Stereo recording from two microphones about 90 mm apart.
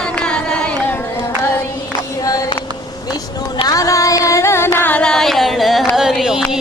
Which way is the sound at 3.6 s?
40° left (ahead or behind).